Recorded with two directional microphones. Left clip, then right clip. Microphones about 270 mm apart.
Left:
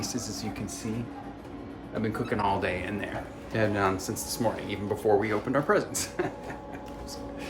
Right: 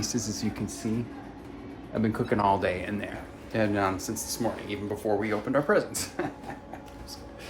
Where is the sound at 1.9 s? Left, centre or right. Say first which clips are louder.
Right 3 dB; centre.